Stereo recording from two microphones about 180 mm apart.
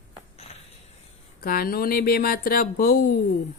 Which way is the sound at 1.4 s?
55° left (ahead or behind).